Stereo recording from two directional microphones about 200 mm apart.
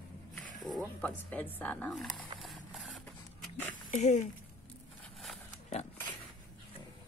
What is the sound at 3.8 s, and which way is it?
Speech, 40° left (ahead or behind).